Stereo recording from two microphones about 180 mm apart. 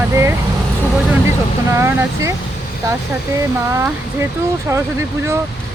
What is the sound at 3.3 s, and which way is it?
Speech, 15° right (ahead or behind).